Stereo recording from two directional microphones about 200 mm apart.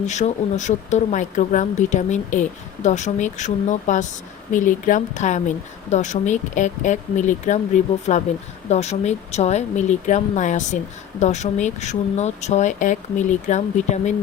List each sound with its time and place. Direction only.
0.0 s speech: 35° left (ahead or behind)